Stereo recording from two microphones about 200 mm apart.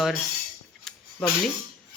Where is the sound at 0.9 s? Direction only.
Centre (ahead or behind).